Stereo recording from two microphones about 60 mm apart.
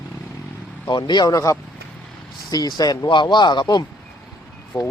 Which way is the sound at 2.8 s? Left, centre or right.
Left.